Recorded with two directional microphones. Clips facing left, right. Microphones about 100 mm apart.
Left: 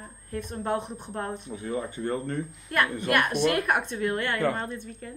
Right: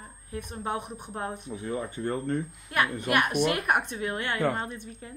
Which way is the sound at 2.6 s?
15° right (ahead or behind).